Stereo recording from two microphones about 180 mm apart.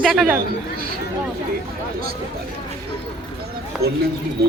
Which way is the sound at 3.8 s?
60° right (ahead or behind).